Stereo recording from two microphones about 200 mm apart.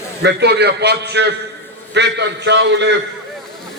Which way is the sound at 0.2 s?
55° right (ahead or behind).